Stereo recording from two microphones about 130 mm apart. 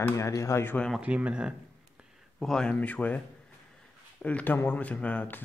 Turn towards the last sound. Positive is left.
turn(degrees=10)  # may be behind; listen again after turning